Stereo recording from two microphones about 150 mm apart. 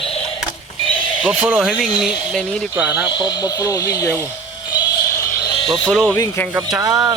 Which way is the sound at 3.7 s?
20° left (ahead or behind).